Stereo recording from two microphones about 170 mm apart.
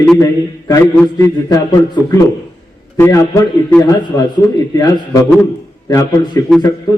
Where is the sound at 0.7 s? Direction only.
25° left (ahead or behind).